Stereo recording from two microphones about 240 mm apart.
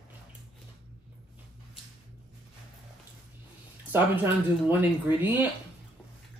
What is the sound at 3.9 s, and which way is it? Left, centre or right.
Speech, centre.